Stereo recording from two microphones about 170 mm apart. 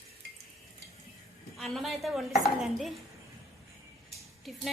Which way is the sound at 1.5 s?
Centre (ahead or behind).